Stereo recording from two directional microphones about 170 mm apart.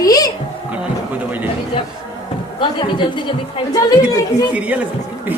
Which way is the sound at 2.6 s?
30° left (ahead or behind).